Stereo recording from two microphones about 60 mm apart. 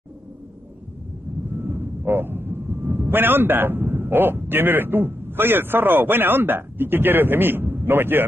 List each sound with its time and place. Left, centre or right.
1.5 s speech: right